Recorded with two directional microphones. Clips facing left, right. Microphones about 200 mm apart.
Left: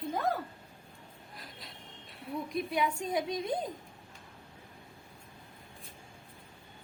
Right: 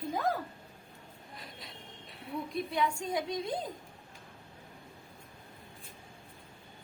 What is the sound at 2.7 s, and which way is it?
Speech, 20° left (ahead or behind).